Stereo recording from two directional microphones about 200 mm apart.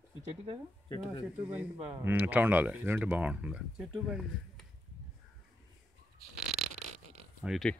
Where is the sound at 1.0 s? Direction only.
5° right (ahead or behind).